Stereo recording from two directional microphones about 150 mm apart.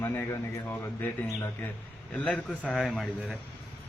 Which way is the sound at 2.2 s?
10° left (ahead or behind).